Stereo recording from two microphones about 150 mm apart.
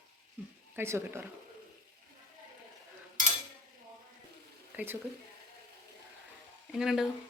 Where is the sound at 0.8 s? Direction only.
15° right (ahead or behind).